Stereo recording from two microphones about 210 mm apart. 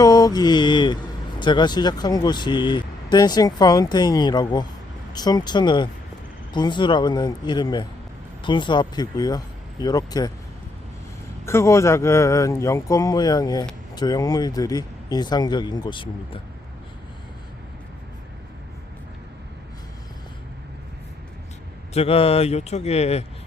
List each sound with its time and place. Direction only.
0.0 s mantra: 20° left (ahead or behind)
1.4 s speech: 20° left (ahead or behind)
11.4 s speech: 15° left (ahead or behind)
21.9 s speech: 25° left (ahead or behind)